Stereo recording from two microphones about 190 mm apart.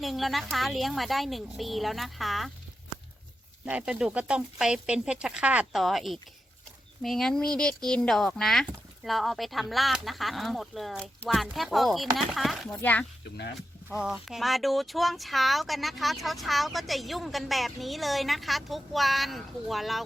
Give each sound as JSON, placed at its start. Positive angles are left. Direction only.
{"t": 0.0, "sound": "speech", "side_deg": 0}
{"t": 3.7, "sound": "speech", "side_deg": -5}
{"t": 13.9, "sound": "speech", "side_deg": -5}